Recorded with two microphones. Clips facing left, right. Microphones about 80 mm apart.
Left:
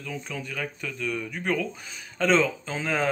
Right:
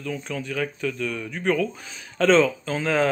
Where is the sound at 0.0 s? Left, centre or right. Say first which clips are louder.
Right 5 dB; centre.